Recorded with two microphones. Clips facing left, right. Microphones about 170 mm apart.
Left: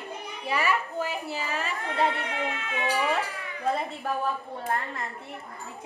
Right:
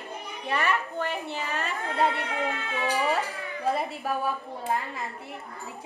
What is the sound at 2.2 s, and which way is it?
Speech, 35° right (ahead or behind).